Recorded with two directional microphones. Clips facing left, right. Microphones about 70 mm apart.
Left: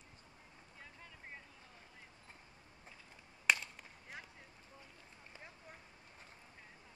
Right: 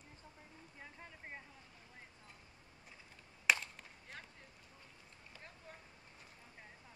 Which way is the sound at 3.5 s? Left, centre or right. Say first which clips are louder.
Even; centre.